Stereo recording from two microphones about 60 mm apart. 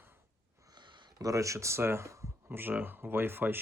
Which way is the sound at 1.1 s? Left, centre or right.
Right.